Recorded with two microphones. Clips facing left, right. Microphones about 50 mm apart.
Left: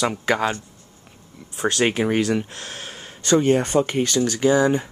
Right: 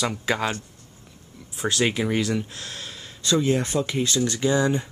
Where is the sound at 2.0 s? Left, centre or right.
Left.